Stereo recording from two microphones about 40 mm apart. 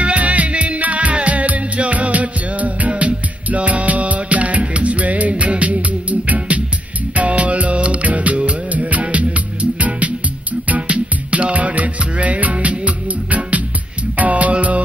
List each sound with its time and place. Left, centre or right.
0.0 s music: right